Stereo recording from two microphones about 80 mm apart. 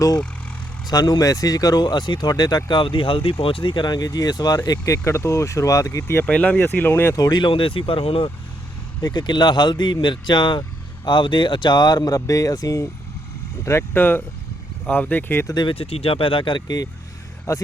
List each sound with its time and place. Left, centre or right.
0.9 s speech: left
4.9 s speech: left
6.2 s speech: centre
6.6 s speech: left
7.2 s speech: left
7.4 s speech: left
9.0 s speech: left
13.7 s speech: left
16.3 s speech: left
17.5 s speech: left